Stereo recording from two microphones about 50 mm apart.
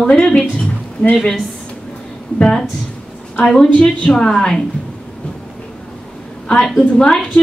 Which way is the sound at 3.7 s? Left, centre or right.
Left.